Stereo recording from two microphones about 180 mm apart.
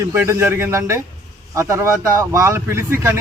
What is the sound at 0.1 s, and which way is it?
A man's voice, 15° right (ahead or behind).